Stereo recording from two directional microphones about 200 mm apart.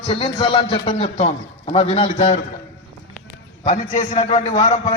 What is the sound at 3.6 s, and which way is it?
Speech, 40° left (ahead or behind).